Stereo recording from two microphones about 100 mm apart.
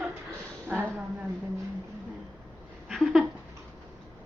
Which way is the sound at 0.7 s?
15° right (ahead or behind).